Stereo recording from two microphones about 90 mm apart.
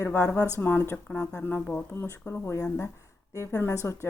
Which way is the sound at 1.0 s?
10° left (ahead or behind).